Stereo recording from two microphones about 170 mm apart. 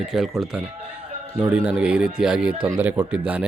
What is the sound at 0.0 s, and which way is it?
Speech, centre (ahead or behind).